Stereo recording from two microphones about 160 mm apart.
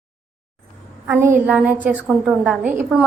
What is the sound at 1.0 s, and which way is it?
A woman's voice, 15° right (ahead or behind).